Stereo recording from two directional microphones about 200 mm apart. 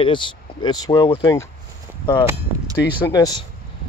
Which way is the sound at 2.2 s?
15° right (ahead or behind).